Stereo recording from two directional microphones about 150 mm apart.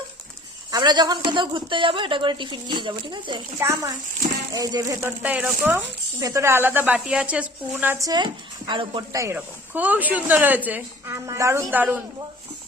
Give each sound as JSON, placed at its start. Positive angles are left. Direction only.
{"t": 0.7, "sound": "speech", "side_deg": -30}
{"t": 3.6, "sound": "a woman's voice", "side_deg": -20}
{"t": 6.1, "sound": "a woman's voice", "side_deg": -20}
{"t": 8.0, "sound": "speech", "side_deg": -30}
{"t": 9.1, "sound": "a woman's voice", "side_deg": -15}